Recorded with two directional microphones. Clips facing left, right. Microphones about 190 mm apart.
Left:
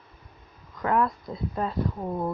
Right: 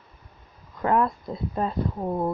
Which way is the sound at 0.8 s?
25° right (ahead or behind).